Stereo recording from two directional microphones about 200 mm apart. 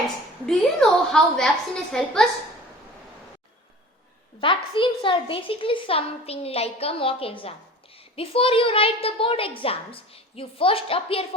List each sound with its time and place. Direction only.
0.4 s a woman's voice: 5° left (ahead or behind)
4.4 s a woman's voice: 25° left (ahead or behind)